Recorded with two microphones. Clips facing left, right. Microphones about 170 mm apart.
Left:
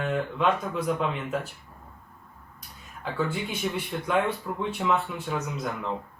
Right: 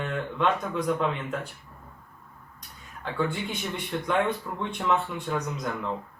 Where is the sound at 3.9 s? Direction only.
10° left (ahead or behind).